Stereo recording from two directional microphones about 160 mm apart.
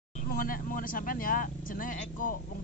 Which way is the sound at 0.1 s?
55° left (ahead or behind).